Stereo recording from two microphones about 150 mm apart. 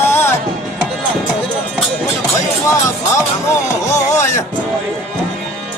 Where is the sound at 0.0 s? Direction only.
15° left (ahead or behind).